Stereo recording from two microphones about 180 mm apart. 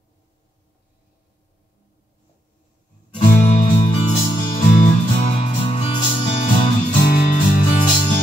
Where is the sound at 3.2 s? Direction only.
45° left (ahead or behind).